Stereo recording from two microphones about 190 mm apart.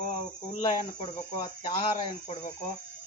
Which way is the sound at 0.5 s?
40° left (ahead or behind).